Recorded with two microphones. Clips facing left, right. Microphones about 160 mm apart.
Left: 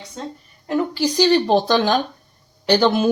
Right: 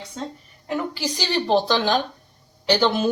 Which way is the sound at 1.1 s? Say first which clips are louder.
Left 5 dB; 40° left (ahead or behind).